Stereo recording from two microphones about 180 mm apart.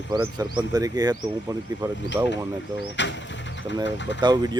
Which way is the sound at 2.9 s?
90° left.